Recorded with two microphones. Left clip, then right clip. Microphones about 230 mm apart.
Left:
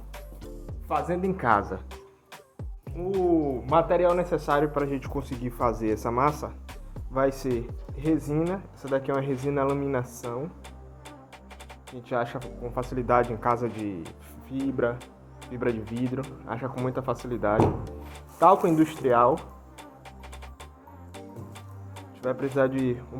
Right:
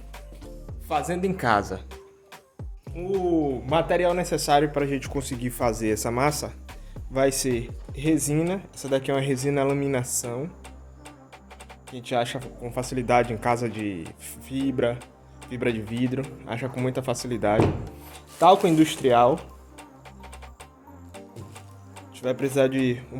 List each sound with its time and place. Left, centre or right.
0.9 s speech: right
3.2 s a man's voice: right
11.9 s a man's voice: right
17.8 s music: centre
18.3 s speech: right
19.4 s music: centre
22.1 s music: right
22.5 s a man's voice: right